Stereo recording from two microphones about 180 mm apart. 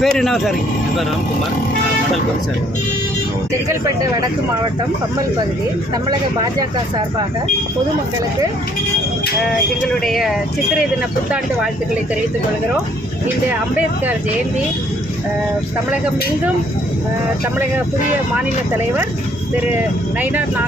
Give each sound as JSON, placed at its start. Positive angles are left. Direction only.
{"t": 0.0, "sound": "speech", "side_deg": 0}
{"t": 3.7, "sound": "speech", "side_deg": -20}
{"t": 6.1, "sound": "speech", "side_deg": -25}
{"t": 10.0, "sound": "speech", "side_deg": 0}
{"t": 18.3, "sound": "speech", "side_deg": -10}